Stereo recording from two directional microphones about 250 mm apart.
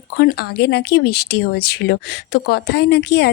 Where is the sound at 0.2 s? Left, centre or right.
Left.